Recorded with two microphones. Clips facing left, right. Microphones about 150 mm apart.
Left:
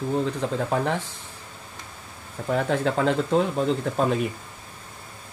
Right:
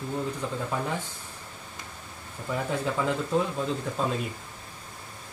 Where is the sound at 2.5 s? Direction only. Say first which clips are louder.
Left 6 dB; 85° left.